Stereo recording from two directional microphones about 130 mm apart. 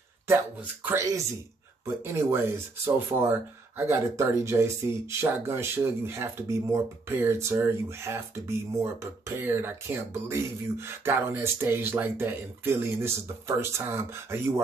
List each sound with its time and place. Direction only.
0.3 s speech: 15° right (ahead or behind)
2.0 s speech: 20° right (ahead or behind)